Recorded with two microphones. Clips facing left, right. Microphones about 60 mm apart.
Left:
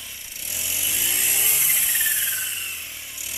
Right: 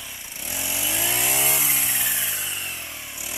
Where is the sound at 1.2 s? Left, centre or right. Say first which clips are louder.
Right 4 dB; right.